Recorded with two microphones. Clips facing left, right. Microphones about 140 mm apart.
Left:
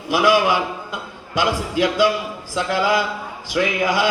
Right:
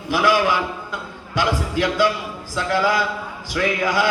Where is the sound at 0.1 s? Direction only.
10° left (ahead or behind).